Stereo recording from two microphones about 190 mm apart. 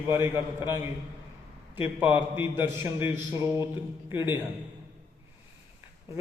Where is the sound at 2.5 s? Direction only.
15° right (ahead or behind).